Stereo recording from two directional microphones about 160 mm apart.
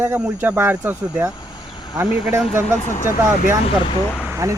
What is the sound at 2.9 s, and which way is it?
Speech, 50° left (ahead or behind).